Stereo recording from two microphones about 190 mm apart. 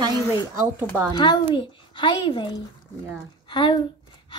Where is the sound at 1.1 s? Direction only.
25° left (ahead or behind).